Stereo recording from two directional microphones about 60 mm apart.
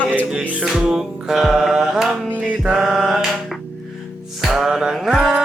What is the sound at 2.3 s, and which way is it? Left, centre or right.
Music, right.